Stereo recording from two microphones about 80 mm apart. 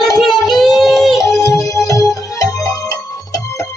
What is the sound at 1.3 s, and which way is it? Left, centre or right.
Music, left.